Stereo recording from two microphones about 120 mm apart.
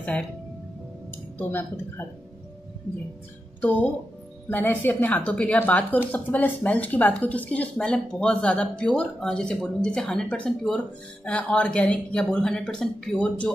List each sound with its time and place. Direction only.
0.1 s speech: 10° left (ahead or behind)
4.5 s speech: 15° left (ahead or behind)